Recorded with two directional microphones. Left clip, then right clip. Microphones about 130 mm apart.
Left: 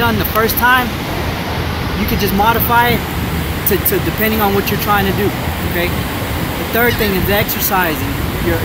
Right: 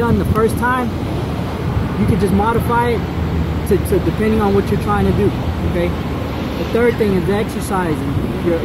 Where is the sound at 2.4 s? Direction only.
15° left (ahead or behind).